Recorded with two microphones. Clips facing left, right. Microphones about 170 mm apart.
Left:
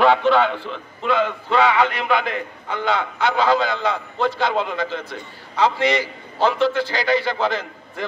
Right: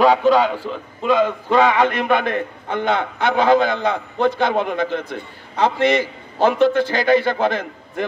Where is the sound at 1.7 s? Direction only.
50° right (ahead or behind).